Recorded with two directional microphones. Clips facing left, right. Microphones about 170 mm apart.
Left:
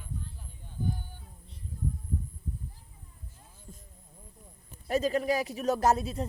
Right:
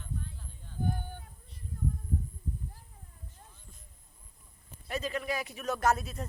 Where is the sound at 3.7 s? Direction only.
40° left (ahead or behind).